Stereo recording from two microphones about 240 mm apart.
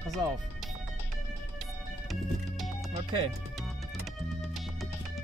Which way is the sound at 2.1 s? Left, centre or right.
Centre.